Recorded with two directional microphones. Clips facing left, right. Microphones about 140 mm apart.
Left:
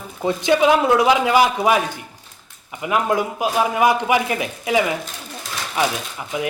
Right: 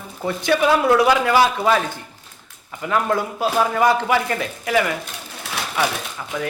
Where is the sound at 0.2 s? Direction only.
20° left (ahead or behind).